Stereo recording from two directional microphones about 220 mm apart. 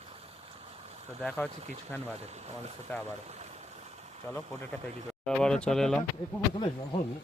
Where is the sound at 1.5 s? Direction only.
30° right (ahead or behind).